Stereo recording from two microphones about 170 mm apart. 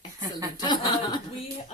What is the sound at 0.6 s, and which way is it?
Speech, 25° left (ahead or behind).